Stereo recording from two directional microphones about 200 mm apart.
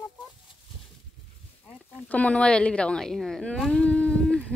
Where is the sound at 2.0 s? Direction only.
5° left (ahead or behind).